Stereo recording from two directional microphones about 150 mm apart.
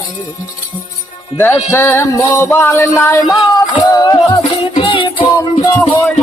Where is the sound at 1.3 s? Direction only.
15° left (ahead or behind).